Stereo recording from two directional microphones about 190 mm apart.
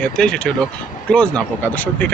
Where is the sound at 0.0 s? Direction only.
5° left (ahead or behind).